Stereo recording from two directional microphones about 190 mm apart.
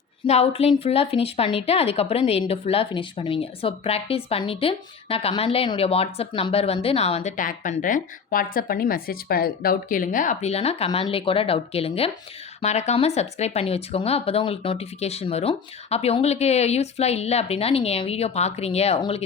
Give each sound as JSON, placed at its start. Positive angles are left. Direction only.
{"t": 0.3, "sound": "speech", "side_deg": 30}